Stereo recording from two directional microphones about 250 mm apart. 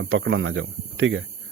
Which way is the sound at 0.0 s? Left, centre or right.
Right.